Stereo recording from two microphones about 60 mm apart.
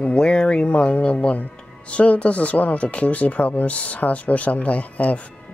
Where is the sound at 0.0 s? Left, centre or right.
Centre.